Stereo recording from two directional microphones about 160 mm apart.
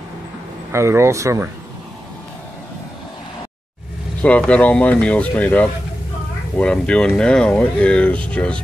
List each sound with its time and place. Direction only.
0.7 s speech: 15° right (ahead or behind)
4.2 s speech: 10° left (ahead or behind)